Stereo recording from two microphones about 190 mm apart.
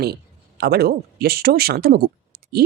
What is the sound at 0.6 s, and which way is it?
Speech, 55° right (ahead or behind).